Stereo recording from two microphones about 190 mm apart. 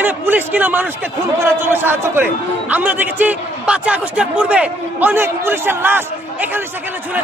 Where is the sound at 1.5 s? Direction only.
10° right (ahead or behind).